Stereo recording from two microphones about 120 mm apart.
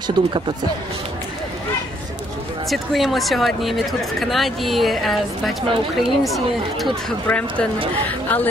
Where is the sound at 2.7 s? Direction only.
Centre (ahead or behind).